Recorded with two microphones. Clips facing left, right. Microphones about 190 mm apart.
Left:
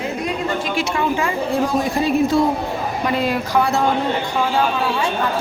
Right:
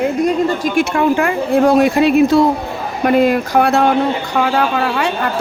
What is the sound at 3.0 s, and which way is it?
A woman's voice, 55° right (ahead or behind).